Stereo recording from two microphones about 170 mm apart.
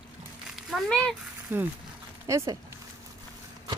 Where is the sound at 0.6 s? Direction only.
5° left (ahead or behind).